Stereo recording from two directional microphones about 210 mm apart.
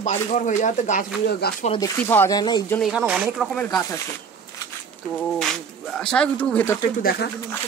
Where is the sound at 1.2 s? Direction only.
50° left (ahead or behind).